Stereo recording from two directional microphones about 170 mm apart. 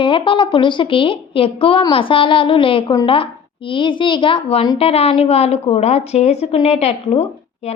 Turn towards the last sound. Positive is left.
turn(degrees=35)  # may be behind; listen again after turning